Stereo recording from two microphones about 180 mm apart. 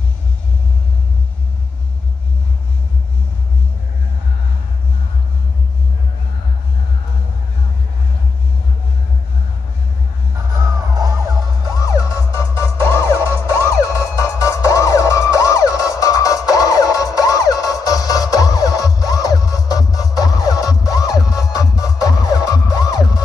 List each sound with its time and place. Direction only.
10.3 s music: 20° right (ahead or behind)
11.8 s music: 15° left (ahead or behind)
13.8 s emergency vehicle: 15° left (ahead or behind)
16.4 s music: 20° left (ahead or behind)